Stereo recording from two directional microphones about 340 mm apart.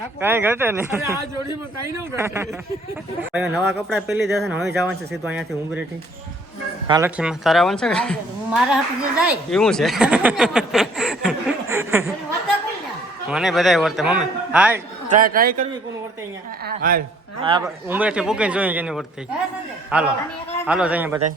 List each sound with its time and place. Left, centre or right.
0.2 s a woman's voice: centre
6.8 s a woman's voice: centre
13.3 s a woman's voice: centre
15.1 s speech: right
17.4 s a woman's voice: centre